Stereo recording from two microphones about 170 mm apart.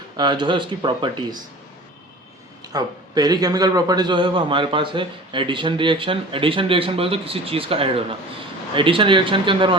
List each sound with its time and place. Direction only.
0.2 s a man's voice: 25° right (ahead or behind)
2.7 s a man's voice: 25° right (ahead or behind)